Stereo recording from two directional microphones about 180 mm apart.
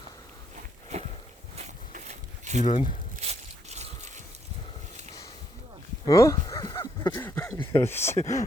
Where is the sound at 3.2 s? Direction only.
35° right (ahead or behind).